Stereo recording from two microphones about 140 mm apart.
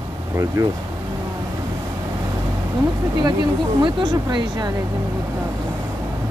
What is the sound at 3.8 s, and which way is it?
Speech, 35° right (ahead or behind).